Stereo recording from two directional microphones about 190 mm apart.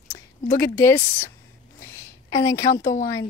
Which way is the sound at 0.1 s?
20° left (ahead or behind).